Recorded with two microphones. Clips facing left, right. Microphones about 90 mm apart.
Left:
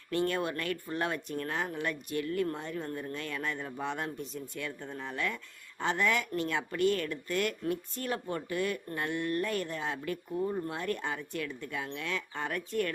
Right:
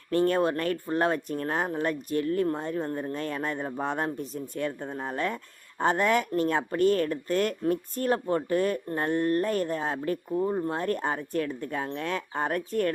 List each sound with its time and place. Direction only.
0.1 s speech: 40° right (ahead or behind)